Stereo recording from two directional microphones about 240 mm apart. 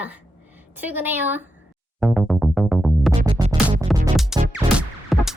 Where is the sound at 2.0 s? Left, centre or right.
Centre.